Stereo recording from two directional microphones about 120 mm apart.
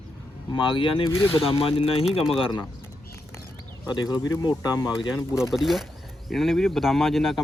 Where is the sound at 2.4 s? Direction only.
40° left (ahead or behind).